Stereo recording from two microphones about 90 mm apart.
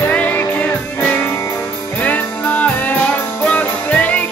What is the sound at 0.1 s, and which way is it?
Music, 15° left (ahead or behind).